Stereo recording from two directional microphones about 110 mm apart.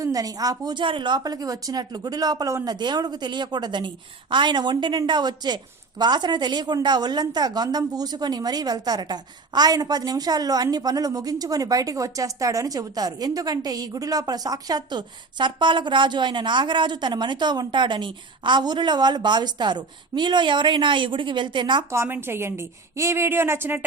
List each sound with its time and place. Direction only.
0.0 s a woman's voice: 35° right (ahead or behind)
21.9 s a woman's voice: 20° right (ahead or behind)